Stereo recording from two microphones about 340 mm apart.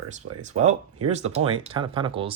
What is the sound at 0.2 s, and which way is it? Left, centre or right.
Speech, right.